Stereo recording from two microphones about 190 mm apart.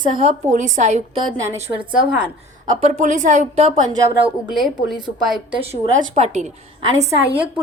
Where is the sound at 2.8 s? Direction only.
40° right (ahead or behind).